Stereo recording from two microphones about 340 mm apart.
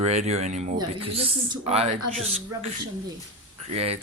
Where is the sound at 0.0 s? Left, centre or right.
Centre.